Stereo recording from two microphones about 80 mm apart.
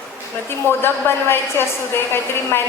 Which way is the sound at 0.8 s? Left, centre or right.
Left.